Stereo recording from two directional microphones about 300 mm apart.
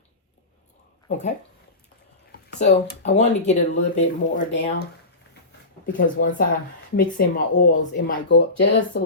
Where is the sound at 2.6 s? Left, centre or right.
Left.